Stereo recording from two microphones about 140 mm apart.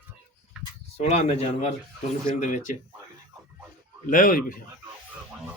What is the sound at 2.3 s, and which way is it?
Speech, 60° left (ahead or behind).